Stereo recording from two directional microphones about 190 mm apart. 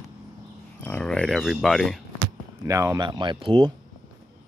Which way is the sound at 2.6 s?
15° right (ahead or behind).